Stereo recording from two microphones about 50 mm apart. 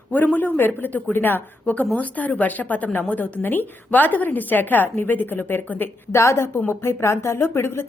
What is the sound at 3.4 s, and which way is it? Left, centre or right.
A woman's voice, left.